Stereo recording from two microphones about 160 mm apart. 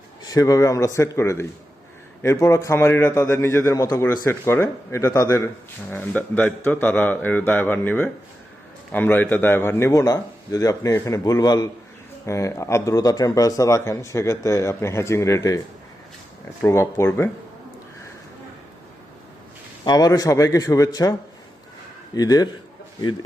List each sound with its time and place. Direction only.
0.3 s a man's voice: 20° left (ahead or behind)
5.9 s a man's voice: 10° left (ahead or behind)
16.6 s a man's voice: 15° left (ahead or behind)
19.8 s speech: 25° left (ahead or behind)